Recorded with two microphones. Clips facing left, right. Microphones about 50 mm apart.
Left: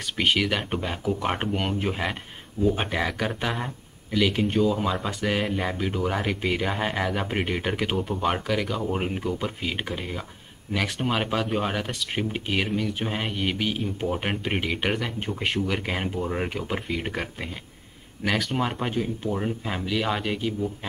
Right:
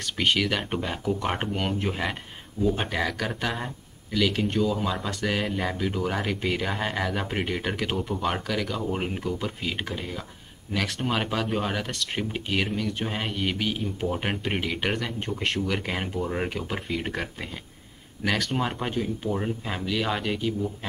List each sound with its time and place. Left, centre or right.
0.0 s speech: centre